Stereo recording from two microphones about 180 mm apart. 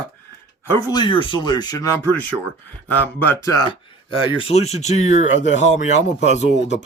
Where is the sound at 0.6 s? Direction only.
15° left (ahead or behind).